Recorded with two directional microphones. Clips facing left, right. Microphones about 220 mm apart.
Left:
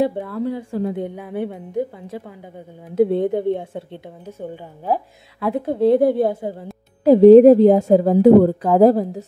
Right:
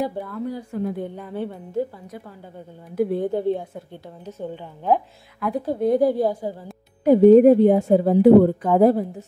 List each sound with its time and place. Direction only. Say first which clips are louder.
0.0 s a woman's voice: left 6 dB; 25° left (ahead or behind)
2.9 s a woman's voice: left 5 dB; 25° left (ahead or behind)
5.4 s a woman's voice: left 4 dB; 25° left (ahead or behind)
6.0 s a woman's voice: left 3 dB; 60° left (ahead or behind)
7.1 s a woman's voice: left 4 dB; 90° left
8.0 s a woman's voice: even; 45° left (ahead or behind)
8.7 s a woman's voice: left 3 dB; 90° left